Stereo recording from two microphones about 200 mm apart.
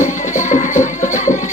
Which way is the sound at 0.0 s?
35° left (ahead or behind).